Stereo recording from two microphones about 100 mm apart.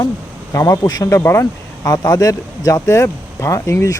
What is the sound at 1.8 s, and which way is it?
Speech, 40° left (ahead or behind).